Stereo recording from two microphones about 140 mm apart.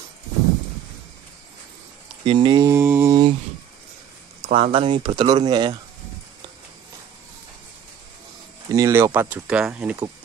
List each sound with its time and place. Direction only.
2.2 s speech: 35° right (ahead or behind)
2.7 s mantra: 15° right (ahead or behind)
3.1 s a sound: 30° right (ahead or behind)
4.4 s speech: 45° right (ahead or behind)
8.7 s speech: 20° right (ahead or behind)